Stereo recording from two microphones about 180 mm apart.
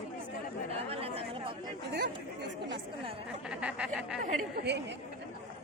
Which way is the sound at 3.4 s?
5° right (ahead or behind).